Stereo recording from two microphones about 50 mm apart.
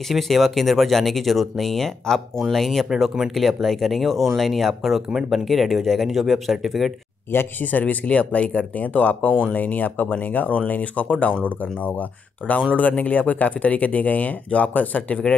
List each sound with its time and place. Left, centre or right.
0.1 s speech: centre
7.3 s speech: left
7.8 s speech: left